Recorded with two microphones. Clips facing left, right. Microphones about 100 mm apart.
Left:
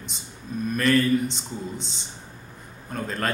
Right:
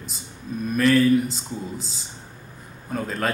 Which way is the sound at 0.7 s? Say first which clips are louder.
Right 3 dB; centre (ahead or behind).